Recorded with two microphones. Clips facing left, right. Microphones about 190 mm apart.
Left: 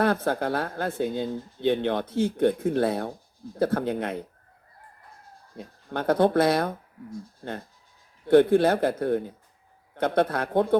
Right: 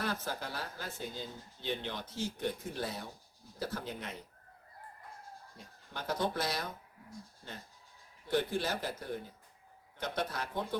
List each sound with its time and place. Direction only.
0.0 s speech: 60° left (ahead or behind)
5.5 s speech: 60° left (ahead or behind)